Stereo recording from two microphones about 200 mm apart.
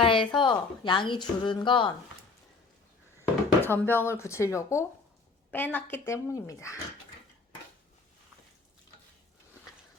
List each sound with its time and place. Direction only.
0.0 s a sound: 25° left (ahead or behind)
0.3 s a woman's voice: 25° left (ahead or behind)
3.2 s a woman's voice: 10° left (ahead or behind)